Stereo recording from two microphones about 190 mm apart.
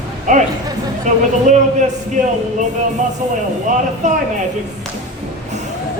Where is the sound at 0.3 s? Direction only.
40° right (ahead or behind).